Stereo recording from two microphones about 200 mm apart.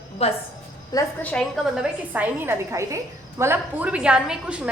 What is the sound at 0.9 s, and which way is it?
Speech, 15° left (ahead or behind).